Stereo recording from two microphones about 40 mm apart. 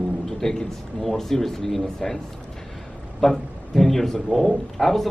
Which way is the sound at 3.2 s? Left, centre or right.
Centre.